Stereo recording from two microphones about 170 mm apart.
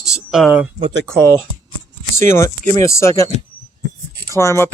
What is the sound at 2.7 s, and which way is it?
Speech, 15° left (ahead or behind).